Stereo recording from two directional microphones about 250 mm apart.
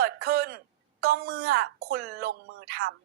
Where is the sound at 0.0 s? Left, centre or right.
Right.